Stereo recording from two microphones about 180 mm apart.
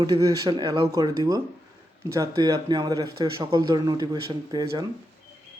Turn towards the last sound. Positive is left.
turn(degrees=-25)  # may be behind; listen again after turning